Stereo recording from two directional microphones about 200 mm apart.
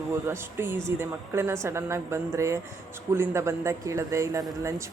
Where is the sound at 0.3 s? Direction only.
10° right (ahead or behind).